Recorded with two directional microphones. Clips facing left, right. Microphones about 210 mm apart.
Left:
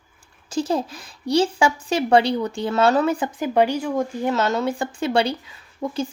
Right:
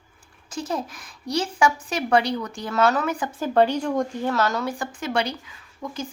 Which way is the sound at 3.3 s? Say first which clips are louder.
Left 1 dB; 15° left (ahead or behind).